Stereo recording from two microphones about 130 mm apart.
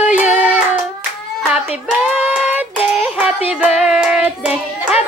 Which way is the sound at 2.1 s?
10° right (ahead or behind).